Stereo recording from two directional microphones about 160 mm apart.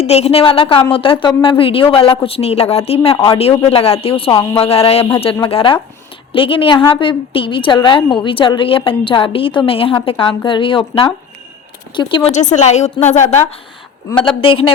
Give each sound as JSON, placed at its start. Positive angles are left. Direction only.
{"t": 0.0, "sound": "a woman's voice", "side_deg": 40}
{"t": 12.3, "sound": "a woman's voice", "side_deg": 50}
{"t": 14.2, "sound": "a woman's voice", "side_deg": 35}